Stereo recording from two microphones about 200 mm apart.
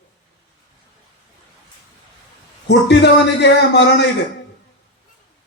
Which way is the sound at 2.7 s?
60° left (ahead or behind).